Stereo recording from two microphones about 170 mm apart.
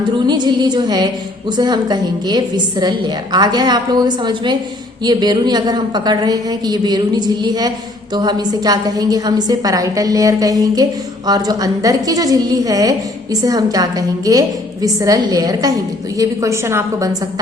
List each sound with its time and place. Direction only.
0.3 s a woman's voice: 25° right (ahead or behind)